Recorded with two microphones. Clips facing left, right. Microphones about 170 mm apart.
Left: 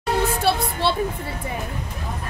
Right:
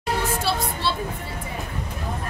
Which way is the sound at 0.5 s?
60° left (ahead or behind).